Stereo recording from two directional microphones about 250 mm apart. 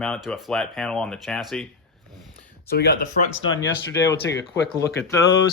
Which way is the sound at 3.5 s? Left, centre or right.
Centre.